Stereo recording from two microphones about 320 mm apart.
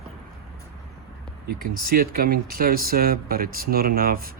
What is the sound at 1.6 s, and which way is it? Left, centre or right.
Speech, right.